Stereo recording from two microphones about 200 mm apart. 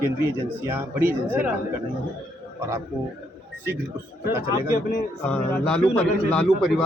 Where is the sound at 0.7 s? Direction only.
10° right (ahead or behind).